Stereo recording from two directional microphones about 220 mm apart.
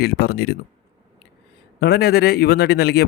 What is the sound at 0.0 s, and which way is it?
Speech, 45° left (ahead or behind).